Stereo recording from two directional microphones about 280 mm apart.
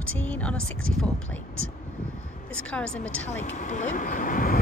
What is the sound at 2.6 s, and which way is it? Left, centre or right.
Speech, centre.